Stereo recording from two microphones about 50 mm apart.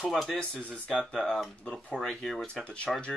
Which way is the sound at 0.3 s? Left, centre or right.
Centre.